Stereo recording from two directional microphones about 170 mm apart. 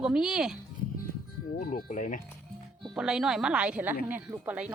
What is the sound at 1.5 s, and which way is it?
Speech, 55° left (ahead or behind).